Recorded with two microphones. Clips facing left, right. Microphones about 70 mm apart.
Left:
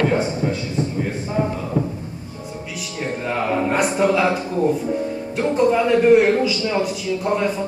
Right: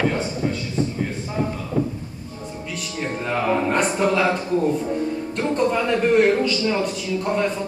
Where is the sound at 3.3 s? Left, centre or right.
Centre.